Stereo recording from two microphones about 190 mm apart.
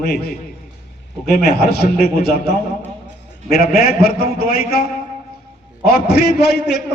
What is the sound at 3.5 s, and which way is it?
A man's voice, 55° left (ahead or behind).